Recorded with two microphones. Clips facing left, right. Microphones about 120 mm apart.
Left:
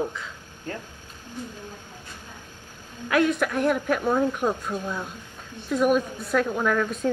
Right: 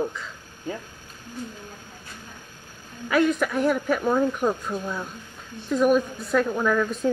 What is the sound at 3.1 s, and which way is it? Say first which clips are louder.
Speech: right 1 dB; centre (ahead or behind).